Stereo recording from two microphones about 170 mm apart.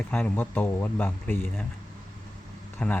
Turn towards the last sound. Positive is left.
turn(degrees=10)  # may be behind; listen again after turning